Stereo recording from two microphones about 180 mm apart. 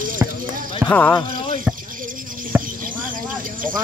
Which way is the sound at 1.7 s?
50° right (ahead or behind).